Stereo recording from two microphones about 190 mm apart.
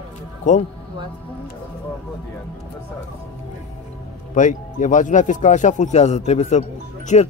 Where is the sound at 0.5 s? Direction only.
40° left (ahead or behind).